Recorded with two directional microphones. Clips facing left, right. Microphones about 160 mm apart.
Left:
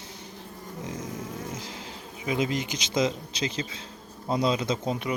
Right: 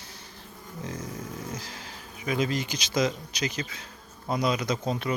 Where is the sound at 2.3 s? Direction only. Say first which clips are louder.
Even; 20° left (ahead or behind).